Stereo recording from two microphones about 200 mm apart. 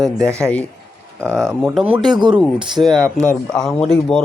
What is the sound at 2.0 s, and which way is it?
Speech, 20° right (ahead or behind).